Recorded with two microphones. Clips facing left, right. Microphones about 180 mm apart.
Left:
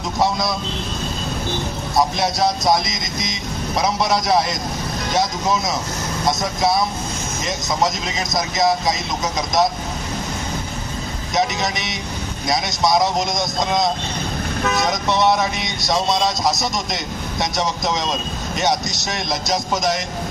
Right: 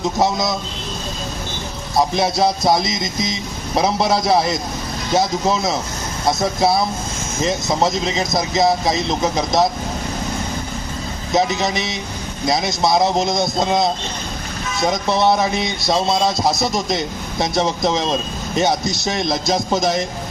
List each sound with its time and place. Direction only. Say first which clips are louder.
0.2 s speech: even; 25° right (ahead or behind)
2.1 s speech: right 2 dB; 25° right (ahead or behind)
11.3 s speech: right 3 dB; 25° right (ahead or behind)